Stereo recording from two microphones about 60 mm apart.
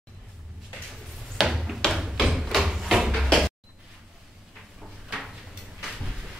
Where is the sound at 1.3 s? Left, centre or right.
Centre.